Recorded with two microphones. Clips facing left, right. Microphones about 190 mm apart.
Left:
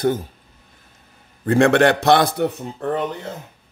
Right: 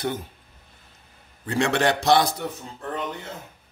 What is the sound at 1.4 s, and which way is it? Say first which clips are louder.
A man's voice: left 8 dB; 55° left (ahead or behind).